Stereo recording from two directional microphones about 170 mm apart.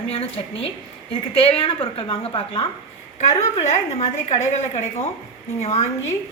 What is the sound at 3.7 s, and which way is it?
A woman's voice, 40° left (ahead or behind).